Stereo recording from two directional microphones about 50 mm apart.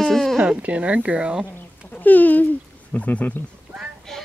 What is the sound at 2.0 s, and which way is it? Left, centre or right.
Speech, left.